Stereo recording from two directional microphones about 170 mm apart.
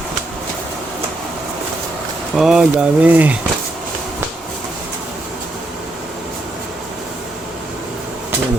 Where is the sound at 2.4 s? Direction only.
5° right (ahead or behind).